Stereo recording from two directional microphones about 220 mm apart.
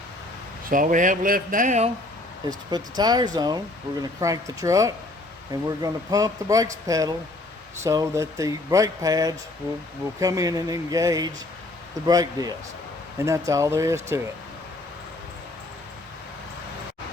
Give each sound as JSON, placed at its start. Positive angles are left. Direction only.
{"t": 0.7, "sound": "speech", "side_deg": -40}
{"t": 2.5, "sound": "speech", "side_deg": -20}